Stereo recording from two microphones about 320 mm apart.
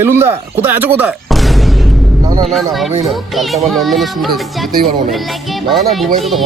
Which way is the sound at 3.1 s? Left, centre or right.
Centre.